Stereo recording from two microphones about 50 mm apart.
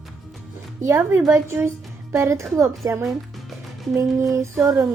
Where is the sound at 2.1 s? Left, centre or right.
Right.